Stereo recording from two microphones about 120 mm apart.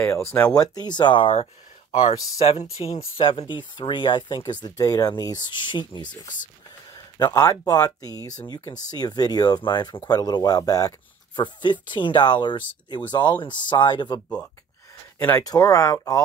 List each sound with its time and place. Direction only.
0.0 s speech: 20° left (ahead or behind)
0.6 s speech: 35° left (ahead or behind); by 2.1 s 65° left (ahead or behind)
2.3 s speech: 55° left (ahead or behind); by 14.2 s 35° left (ahead or behind)
15.1 s speech: 15° left (ahead or behind)
15.4 s speech: 30° left (ahead or behind)